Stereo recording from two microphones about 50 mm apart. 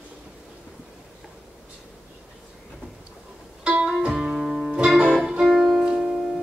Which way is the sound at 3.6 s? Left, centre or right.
Centre.